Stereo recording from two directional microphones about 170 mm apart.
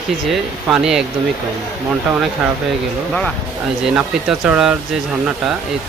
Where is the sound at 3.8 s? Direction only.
5° right (ahead or behind).